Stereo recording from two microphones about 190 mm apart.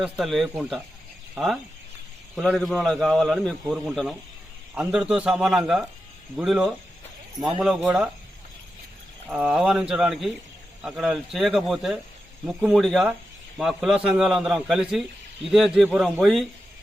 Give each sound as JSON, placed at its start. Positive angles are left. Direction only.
{"t": 0.0, "sound": "a man's voice", "side_deg": 0}
{"t": 7.3, "sound": "speech", "side_deg": -25}
{"t": 7.6, "sound": "a man's voice", "side_deg": -5}
{"t": 9.3, "sound": "a man's voice", "side_deg": -5}